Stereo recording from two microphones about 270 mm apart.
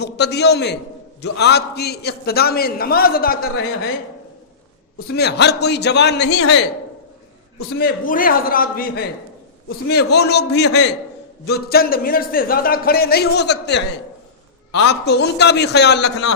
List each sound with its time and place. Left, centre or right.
0.0 s speech: left
5.1 s speech: left
7.8 s speech: left